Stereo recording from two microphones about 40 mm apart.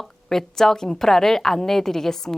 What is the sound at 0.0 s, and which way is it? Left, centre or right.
A woman's voice, centre.